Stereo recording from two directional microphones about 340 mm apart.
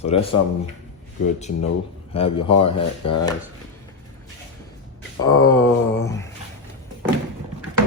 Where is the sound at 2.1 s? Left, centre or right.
Centre.